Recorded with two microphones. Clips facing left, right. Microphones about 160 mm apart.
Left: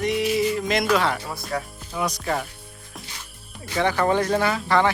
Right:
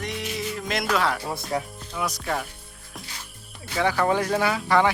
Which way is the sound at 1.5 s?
20° right (ahead or behind).